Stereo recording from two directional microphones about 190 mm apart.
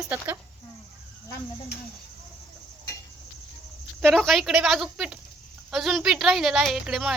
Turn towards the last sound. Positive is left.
turn(degrees=-5)  # may be behind; listen again after turning